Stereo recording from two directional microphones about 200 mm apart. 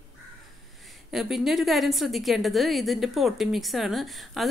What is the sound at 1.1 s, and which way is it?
A woman's voice, centre (ahead or behind).